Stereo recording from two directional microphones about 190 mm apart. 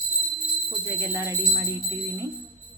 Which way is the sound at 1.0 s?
15° right (ahead or behind).